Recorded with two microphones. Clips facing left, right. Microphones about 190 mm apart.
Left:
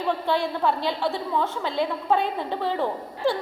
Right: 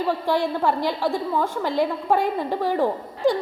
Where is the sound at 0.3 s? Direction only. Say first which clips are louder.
Right 2 dB; 15° right (ahead or behind).